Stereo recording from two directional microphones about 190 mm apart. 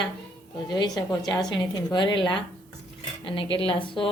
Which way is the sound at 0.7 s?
25° left (ahead or behind).